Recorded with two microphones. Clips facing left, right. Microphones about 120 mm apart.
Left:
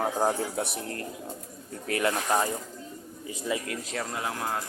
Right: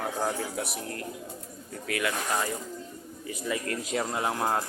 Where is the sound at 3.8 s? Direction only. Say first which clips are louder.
Right 4 dB; 15° right (ahead or behind).